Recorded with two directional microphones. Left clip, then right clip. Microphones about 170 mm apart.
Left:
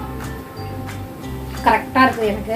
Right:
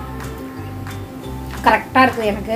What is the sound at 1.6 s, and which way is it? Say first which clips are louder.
Speech: right 1 dB; 70° right (ahead or behind).